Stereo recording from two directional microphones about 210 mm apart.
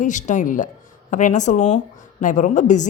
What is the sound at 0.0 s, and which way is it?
A woman's voice, 35° left (ahead or behind).